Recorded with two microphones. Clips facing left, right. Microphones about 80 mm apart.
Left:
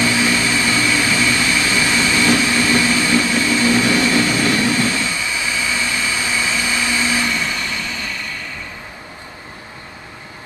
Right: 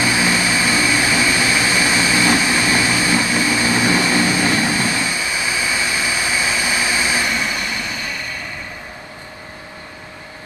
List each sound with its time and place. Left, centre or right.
0.0 s vehicle: centre